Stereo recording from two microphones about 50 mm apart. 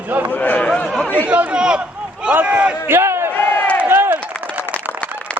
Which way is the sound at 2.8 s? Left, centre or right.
Right.